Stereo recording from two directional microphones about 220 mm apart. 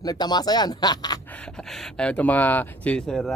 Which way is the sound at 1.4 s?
Centre (ahead or behind).